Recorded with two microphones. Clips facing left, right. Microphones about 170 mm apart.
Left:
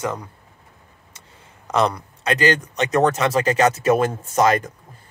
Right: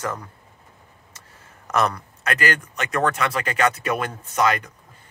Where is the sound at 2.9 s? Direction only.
35° left (ahead or behind).